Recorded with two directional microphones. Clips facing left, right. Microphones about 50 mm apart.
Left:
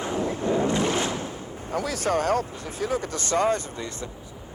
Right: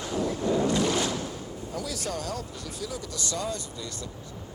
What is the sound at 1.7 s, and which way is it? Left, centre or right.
Speech, left.